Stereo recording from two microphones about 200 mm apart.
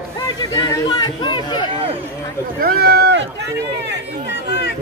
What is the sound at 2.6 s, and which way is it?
Speech, 50° right (ahead or behind).